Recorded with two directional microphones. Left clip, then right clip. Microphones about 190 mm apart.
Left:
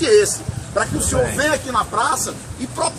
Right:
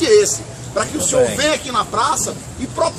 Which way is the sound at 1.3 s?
25° left (ahead or behind).